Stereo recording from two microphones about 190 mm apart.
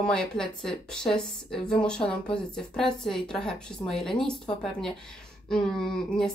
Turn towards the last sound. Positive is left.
turn(degrees=5)  # may be behind; listen again after turning